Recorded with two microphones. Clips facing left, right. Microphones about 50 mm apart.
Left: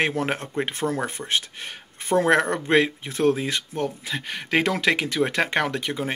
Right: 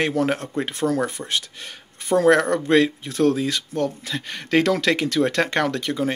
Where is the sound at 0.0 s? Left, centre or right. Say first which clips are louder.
Right 3 dB; left.